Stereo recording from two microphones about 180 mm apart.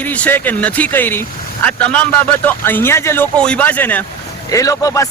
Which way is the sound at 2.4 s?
10° left (ahead or behind).